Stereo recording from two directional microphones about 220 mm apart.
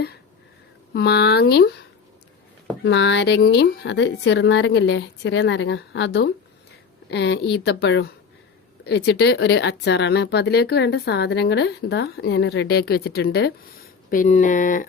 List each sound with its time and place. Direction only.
0.9 s speech: 45° left (ahead or behind)
2.8 s speech: 55° left (ahead or behind)
14.1 s speech: 35° left (ahead or behind)